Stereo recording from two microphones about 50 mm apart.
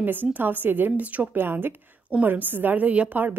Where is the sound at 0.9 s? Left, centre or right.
Right.